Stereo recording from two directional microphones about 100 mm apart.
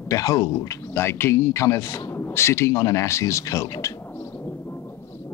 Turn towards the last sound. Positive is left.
turn(degrees=30)  # may be behind; listen again after turning